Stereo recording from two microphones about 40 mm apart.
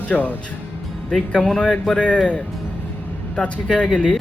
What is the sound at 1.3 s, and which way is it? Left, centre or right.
Speech, left.